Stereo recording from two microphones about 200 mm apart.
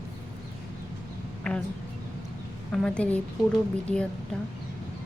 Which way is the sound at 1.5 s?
5° left (ahead or behind).